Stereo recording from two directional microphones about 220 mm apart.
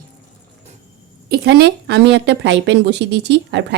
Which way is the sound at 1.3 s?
50° right (ahead or behind).